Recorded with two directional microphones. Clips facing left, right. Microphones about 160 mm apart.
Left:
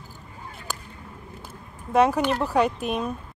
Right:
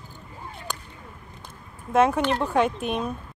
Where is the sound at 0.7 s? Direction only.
5° left (ahead or behind).